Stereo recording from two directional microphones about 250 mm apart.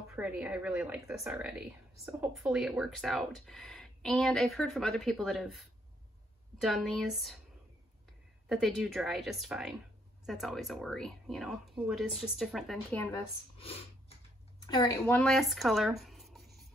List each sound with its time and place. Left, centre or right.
0.1 s speech: centre
6.6 s speech: centre
8.5 s speech: centre
12.9 s speech: centre
13.6 s a sound: left
14.7 s speech: centre